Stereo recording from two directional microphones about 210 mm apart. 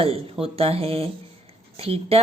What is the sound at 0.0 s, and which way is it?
Speech, 25° right (ahead or behind).